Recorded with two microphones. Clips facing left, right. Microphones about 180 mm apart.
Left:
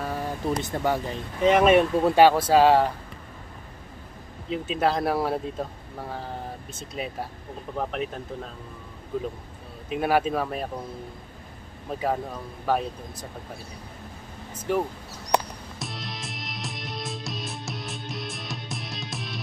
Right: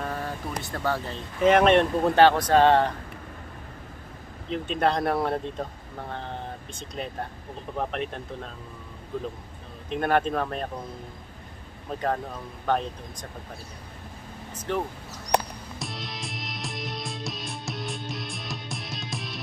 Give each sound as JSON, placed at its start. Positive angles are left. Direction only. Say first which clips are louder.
{"t": 0.0, "sound": "speech", "louder": "left 3 dB", "side_deg": 10}
{"t": 1.4, "sound": "speech", "louder": "even", "side_deg": 0}
{"t": 4.5, "sound": "speech", "louder": "even", "side_deg": 5}
{"t": 9.8, "sound": "speech", "louder": "left 1 dB", "side_deg": 5}
{"t": 12.6, "sound": "speech", "louder": "left 1 dB", "side_deg": 5}
{"t": 14.7, "sound": "speech", "louder": "left 3 dB", "side_deg": 10}
{"t": 15.8, "sound": "music", "louder": "even", "side_deg": 0}